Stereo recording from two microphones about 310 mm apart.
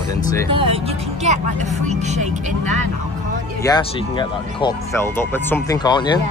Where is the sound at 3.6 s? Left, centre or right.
Centre.